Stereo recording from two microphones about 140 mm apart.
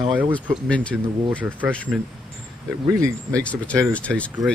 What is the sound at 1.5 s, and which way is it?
Speech, 10° right (ahead or behind).